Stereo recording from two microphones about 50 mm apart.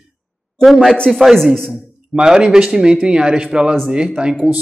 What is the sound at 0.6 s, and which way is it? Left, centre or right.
Speech, centre.